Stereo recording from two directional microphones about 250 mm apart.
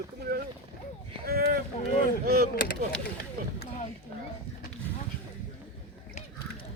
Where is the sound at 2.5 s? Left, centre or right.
Left.